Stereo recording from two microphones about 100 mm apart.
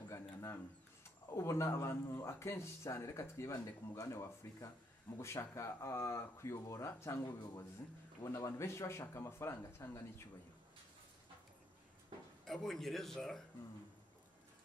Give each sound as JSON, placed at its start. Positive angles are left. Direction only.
{"t": 0.1, "sound": "a sound", "side_deg": 30}
{"t": 1.3, "sound": "speech", "side_deg": 30}
{"t": 12.4, "sound": "speech", "side_deg": 5}